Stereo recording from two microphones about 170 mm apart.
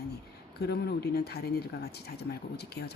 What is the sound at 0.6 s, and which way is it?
Speech, 70° left (ahead or behind).